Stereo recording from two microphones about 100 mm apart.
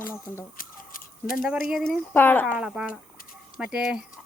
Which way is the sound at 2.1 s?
20° left (ahead or behind).